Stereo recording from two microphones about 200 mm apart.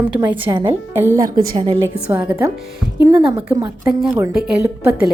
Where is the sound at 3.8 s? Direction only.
5° right (ahead or behind).